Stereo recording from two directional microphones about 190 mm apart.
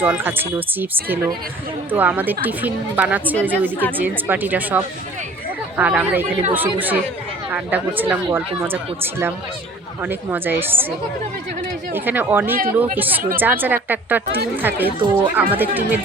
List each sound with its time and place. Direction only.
0.0 s speech: 10° right (ahead or behind)
11.9 s speech: 10° right (ahead or behind)
12.5 s speech: 50° right (ahead or behind)
13.0 s speech: 10° right (ahead or behind)